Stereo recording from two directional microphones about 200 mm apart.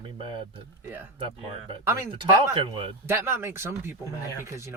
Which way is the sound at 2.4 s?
25° right (ahead or behind).